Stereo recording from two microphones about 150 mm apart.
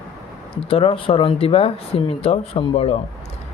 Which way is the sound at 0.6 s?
40° left (ahead or behind).